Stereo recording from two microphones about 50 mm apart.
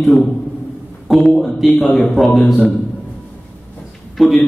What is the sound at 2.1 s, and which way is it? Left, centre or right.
Speech, centre.